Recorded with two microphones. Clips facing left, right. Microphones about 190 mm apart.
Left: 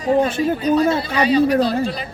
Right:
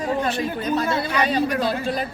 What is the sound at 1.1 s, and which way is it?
Speech, 50° right (ahead or behind).